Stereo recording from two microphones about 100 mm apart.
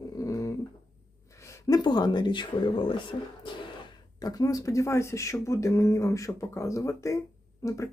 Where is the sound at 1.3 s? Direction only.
30° left (ahead or behind); by 3.9 s 55° left (ahead or behind).